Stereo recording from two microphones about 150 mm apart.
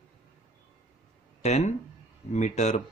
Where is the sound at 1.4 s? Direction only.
50° left (ahead or behind).